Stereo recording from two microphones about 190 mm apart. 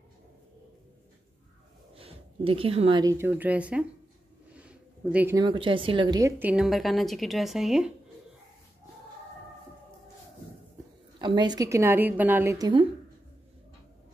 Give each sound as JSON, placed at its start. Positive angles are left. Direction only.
{"t": 2.0, "sound": "a sound", "side_deg": -30}
{"t": 3.0, "sound": "a woman's voice", "side_deg": -15}
{"t": 4.6, "sound": "a sound", "side_deg": -5}
{"t": 5.4, "sound": "a woman's voice", "side_deg": -25}
{"t": 6.4, "sound": "a woman's voice", "side_deg": -5}
{"t": 11.1, "sound": "a woman's voice", "side_deg": -25}